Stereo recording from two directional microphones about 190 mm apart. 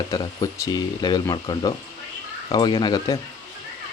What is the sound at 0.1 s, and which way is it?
Speech, 20° left (ahead or behind).